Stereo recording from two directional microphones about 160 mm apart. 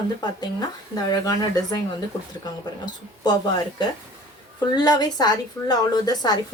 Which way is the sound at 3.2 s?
25° left (ahead or behind).